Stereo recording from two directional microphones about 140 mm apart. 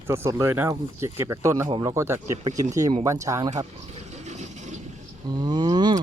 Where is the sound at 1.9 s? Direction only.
20° right (ahead or behind).